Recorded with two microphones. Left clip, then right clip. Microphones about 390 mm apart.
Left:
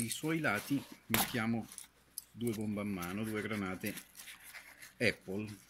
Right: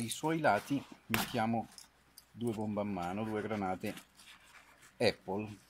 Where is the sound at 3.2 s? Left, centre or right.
Right.